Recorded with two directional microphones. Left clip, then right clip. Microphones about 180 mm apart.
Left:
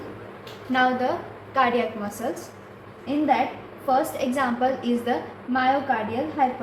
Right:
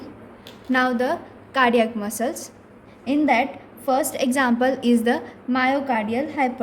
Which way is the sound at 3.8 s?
85° right.